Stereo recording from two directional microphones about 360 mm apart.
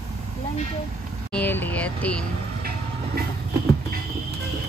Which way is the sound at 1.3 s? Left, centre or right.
Centre.